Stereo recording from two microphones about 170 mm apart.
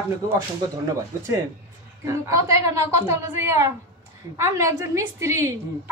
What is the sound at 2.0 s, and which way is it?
A woman's voice, 20° right (ahead or behind).